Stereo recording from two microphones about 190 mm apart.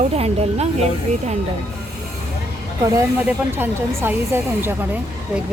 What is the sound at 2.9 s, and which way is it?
A woman's voice, 10° right (ahead or behind).